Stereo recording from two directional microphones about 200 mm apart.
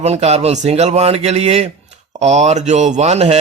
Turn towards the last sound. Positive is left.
turn(degrees=-35)  # may be behind; listen again after turning